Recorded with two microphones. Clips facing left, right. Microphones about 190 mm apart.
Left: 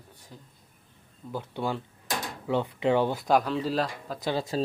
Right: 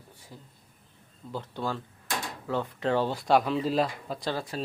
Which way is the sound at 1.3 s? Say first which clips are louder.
Left 2 dB; 10° left (ahead or behind).